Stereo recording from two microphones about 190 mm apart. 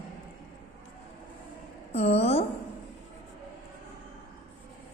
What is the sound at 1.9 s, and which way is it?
Speech, 35° left (ahead or behind).